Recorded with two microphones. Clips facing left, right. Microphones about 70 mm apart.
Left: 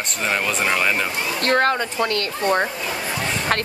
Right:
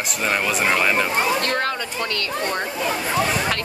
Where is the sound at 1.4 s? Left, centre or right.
Left.